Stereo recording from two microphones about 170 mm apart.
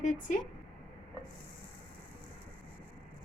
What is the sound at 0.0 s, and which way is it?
Speech, 50° left (ahead or behind).